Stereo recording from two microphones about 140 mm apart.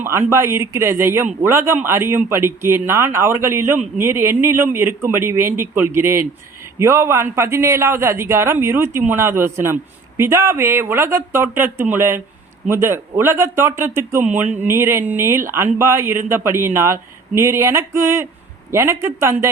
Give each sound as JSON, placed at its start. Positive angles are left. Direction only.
{"t": 0.0, "sound": "a man's voice", "side_deg": -20}